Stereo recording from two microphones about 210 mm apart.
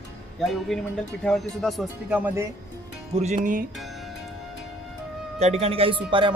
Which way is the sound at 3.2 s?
30° right (ahead or behind).